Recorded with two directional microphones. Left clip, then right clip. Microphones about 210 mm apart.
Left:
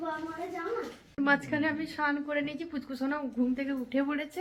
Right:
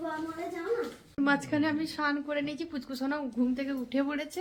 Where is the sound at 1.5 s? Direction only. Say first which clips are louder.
Right 1 dB; 10° right (ahead or behind).